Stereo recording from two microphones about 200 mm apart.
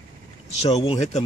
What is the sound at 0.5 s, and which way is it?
Speech, 30° left (ahead or behind).